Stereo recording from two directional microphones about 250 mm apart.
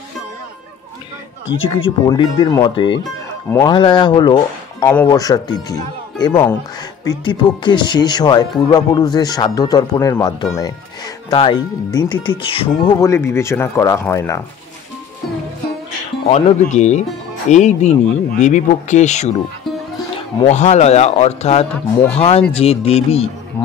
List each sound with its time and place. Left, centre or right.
1.7 s speech: centre
16.3 s speech: left
20.4 s speech: left